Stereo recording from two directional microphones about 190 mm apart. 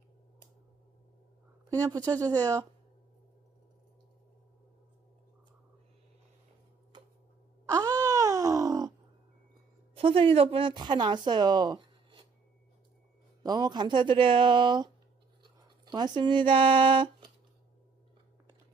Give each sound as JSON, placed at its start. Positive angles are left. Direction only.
{"t": 2.0, "sound": "speech", "side_deg": -20}
{"t": 7.7, "sound": "wail", "side_deg": -20}
{"t": 9.9, "sound": "speech", "side_deg": -30}
{"t": 13.4, "sound": "speech", "side_deg": -20}
{"t": 15.9, "sound": "speech", "side_deg": -20}